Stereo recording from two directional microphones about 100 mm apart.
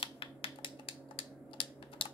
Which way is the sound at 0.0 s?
65° left (ahead or behind).